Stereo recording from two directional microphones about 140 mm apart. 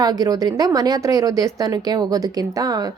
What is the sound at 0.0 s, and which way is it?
A woman's voice, 30° right (ahead or behind).